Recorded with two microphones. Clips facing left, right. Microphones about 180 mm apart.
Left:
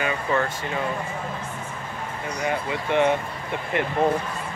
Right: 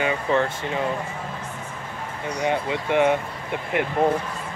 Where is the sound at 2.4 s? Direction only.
20° right (ahead or behind).